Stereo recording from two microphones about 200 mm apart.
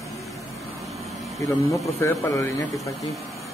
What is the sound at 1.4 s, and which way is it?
Speech, 15° left (ahead or behind).